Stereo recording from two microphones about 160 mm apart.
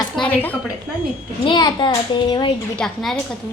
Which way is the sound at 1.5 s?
25° left (ahead or behind).